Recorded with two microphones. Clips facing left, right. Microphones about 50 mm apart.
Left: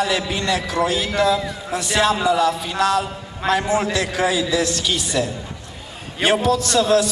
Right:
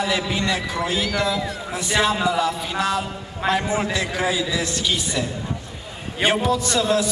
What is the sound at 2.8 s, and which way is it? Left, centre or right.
Music, left.